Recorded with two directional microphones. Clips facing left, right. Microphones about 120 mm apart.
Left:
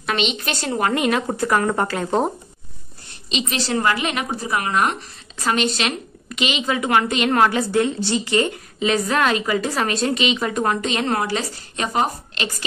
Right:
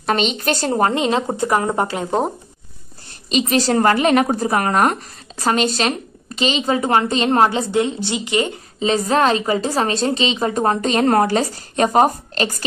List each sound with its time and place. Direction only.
0.0 s speech: 40° right (ahead or behind)
0.9 s speech: 25° right (ahead or behind)
3.3 s speech: 45° right (ahead or behind); by 8.5 s 15° right (ahead or behind)
8.7 s speech: 30° right (ahead or behind)